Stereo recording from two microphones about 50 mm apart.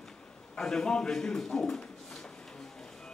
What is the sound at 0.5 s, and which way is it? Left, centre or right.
A man's voice, centre.